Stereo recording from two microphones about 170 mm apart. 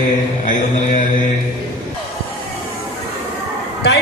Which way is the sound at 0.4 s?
50° left (ahead or behind).